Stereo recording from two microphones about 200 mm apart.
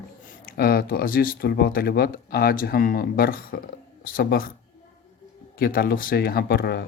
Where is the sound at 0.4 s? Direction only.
50° left (ahead or behind).